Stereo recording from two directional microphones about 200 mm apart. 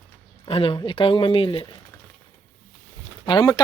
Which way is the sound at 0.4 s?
25° left (ahead or behind).